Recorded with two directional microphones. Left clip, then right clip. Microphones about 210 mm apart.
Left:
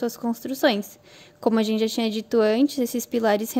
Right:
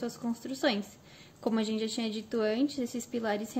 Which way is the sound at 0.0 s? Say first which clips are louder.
Left 9 dB; 50° left (ahead or behind).